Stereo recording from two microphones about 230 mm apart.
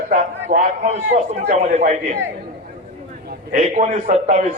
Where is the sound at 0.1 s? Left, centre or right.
Right.